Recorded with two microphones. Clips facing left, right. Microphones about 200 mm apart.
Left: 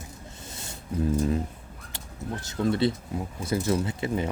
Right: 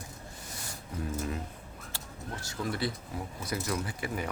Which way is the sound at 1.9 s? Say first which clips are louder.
Left 7 dB; 20° left (ahead or behind).